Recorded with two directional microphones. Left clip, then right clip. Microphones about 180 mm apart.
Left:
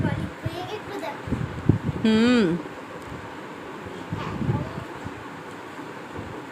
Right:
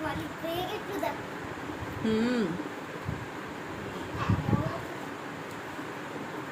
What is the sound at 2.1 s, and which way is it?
Speech, 55° left (ahead or behind).